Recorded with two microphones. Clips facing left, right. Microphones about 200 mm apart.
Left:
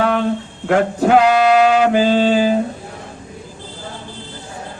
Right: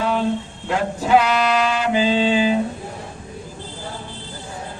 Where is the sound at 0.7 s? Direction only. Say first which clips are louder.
Left 8 dB; 60° left (ahead or behind).